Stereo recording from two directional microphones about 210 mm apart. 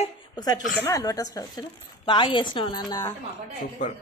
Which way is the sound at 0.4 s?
20° left (ahead or behind).